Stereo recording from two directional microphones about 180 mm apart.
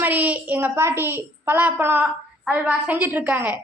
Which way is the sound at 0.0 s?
10° right (ahead or behind).